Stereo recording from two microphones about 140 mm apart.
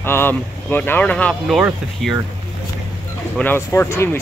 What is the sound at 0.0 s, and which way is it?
Speech, 15° left (ahead or behind).